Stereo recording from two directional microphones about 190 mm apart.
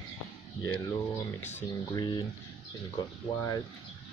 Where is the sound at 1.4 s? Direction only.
10° left (ahead or behind).